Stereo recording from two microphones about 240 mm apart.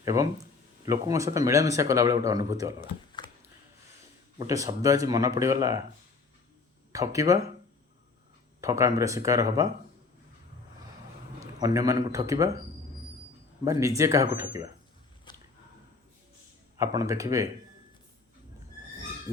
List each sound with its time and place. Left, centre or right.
0.0 s speech: centre
3.2 s a sound: centre
4.4 s speech: centre
6.9 s speech: centre
8.6 s speech: centre
11.3 s a man's voice: centre
13.7 s speech: centre
15.3 s a sound: centre
16.7 s speech: centre